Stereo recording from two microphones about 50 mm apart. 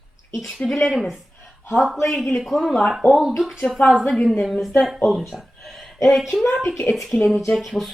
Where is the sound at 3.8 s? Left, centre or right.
Left.